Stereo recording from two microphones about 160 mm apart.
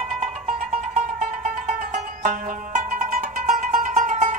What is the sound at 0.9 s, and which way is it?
Music, 50° right (ahead or behind).